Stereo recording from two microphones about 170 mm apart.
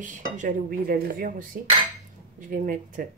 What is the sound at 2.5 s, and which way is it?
Speech, 50° right (ahead or behind).